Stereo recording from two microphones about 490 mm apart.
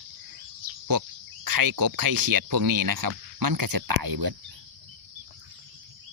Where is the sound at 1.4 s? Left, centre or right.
Right.